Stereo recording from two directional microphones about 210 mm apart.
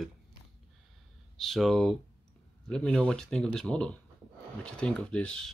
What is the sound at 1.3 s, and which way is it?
Speech, centre (ahead or behind).